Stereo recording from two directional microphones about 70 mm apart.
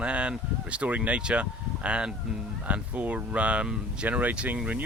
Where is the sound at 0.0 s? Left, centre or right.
Centre.